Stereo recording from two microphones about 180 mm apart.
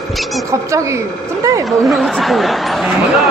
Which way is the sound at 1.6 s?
Centre (ahead or behind).